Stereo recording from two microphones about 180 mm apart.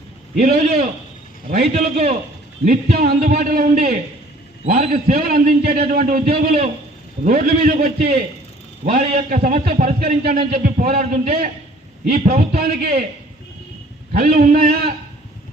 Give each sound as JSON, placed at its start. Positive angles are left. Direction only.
{"t": 0.3, "sound": "a man's voice", "side_deg": -50}
{"t": 2.6, "sound": "a man's voice", "side_deg": -55}
{"t": 4.6, "sound": "a man's voice", "side_deg": -35}
{"t": 5.1, "sound": "a man's voice", "side_deg": -55}
{"t": 10.2, "sound": "a man's voice", "side_deg": -55}
{"t": 12.1, "sound": "a man's voice", "side_deg": -40}
{"t": 12.5, "sound": "a man's voice", "side_deg": -60}
{"t": 14.1, "sound": "a man's voice", "side_deg": -50}